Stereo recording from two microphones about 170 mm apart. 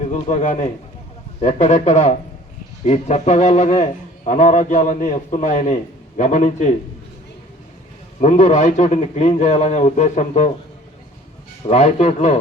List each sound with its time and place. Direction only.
0.1 s a man's voice: 45° left (ahead or behind)
8.2 s a man's voice: 45° left (ahead or behind)
11.7 s speech: 40° left (ahead or behind)